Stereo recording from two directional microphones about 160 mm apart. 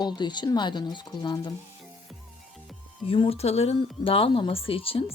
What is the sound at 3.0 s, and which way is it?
Speech, 35° left (ahead or behind).